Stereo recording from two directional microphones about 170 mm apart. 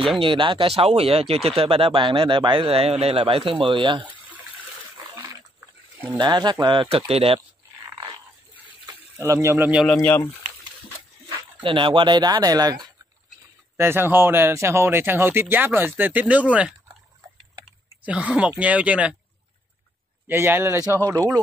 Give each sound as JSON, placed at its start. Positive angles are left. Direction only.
{"t": 0.2, "sound": "speech", "side_deg": -30}
{"t": 6.1, "sound": "speech", "side_deg": -25}
{"t": 9.2, "sound": "speech", "side_deg": -15}
{"t": 9.9, "sound": "speech", "side_deg": 15}
{"t": 11.6, "sound": "speech", "side_deg": -30}
{"t": 13.7, "sound": "speech", "side_deg": -15}
{"t": 18.0, "sound": "speech", "side_deg": -5}
{"t": 20.2, "sound": "speech", "side_deg": -15}